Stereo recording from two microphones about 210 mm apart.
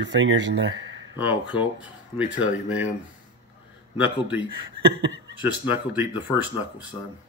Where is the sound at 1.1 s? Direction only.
10° right (ahead or behind).